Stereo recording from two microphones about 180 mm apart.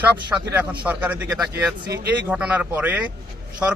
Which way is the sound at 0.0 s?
10° right (ahead or behind).